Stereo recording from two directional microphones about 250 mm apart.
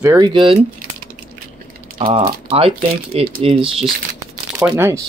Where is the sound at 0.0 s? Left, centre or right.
Centre.